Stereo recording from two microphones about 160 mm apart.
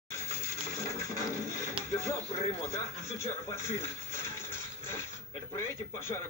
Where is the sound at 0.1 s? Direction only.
20° left (ahead or behind).